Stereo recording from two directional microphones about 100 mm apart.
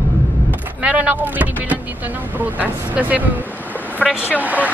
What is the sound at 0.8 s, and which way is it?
Speech, 15° right (ahead or behind).